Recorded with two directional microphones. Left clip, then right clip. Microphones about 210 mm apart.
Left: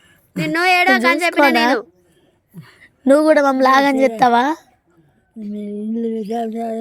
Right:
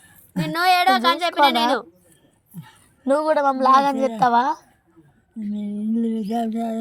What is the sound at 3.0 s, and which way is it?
Speech, 60° left (ahead or behind).